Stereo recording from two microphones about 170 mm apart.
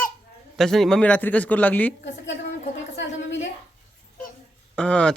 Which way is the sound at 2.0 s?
90° left.